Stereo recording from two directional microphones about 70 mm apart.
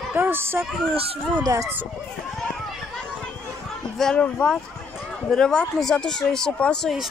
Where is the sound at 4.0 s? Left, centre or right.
Centre.